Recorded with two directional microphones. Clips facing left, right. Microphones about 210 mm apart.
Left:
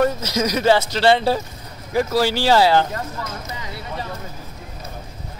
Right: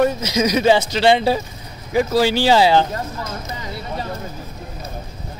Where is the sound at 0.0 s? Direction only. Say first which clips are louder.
Right 2 dB; 15° right (ahead or behind).